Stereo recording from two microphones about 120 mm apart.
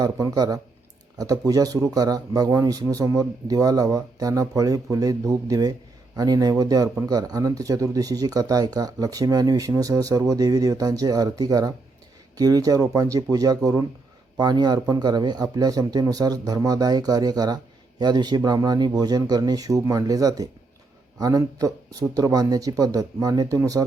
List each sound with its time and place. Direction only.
0.0 s speech: 35° right (ahead or behind)